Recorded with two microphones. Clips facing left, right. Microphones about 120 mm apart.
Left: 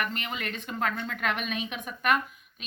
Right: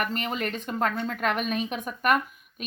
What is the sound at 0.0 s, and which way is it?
A woman's voice, 40° right (ahead or behind).